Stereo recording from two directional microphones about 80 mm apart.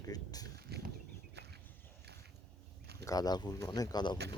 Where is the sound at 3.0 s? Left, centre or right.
Left.